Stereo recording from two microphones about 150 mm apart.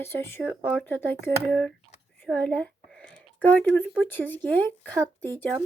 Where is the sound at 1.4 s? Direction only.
5° left (ahead or behind).